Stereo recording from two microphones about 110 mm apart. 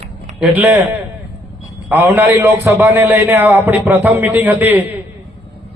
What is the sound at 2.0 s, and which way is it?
A man's voice, 15° right (ahead or behind).